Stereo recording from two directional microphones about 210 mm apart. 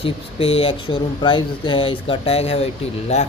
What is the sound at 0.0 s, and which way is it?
Speech, 25° left (ahead or behind).